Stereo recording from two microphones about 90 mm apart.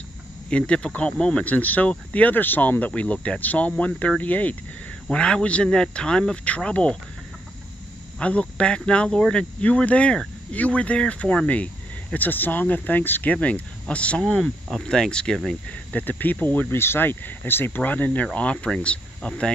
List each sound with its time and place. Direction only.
0.5 s speech: 10° left (ahead or behind)
8.2 s speech: 15° left (ahead or behind)
15.9 s speech: 20° left (ahead or behind)